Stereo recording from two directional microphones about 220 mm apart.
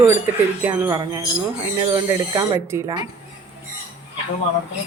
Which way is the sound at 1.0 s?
20° right (ahead or behind).